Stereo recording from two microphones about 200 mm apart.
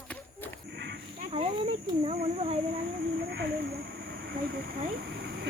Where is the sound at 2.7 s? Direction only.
50° right (ahead or behind).